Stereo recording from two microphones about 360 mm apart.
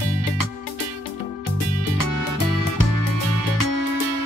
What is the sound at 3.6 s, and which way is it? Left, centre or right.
Music, left.